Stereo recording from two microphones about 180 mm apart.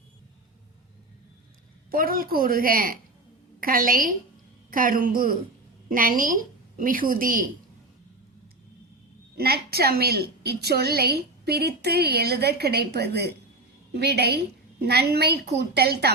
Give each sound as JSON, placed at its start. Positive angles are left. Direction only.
{"t": 1.9, "sound": "a woman's voice", "side_deg": -55}
{"t": 9.4, "sound": "a woman's voice", "side_deg": -60}